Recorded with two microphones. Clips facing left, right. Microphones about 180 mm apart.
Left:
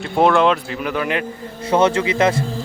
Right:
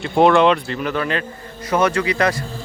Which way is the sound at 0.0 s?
Centre (ahead or behind).